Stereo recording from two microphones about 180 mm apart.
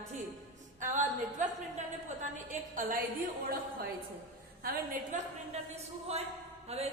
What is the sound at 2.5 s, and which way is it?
Speech, 50° right (ahead or behind).